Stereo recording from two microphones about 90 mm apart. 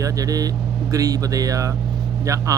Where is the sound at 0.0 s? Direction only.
40° right (ahead or behind).